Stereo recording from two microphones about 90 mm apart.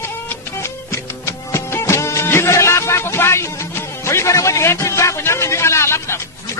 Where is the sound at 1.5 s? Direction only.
30° left (ahead or behind).